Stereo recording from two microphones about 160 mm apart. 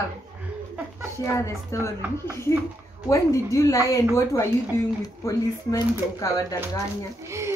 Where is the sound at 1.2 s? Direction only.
20° left (ahead or behind).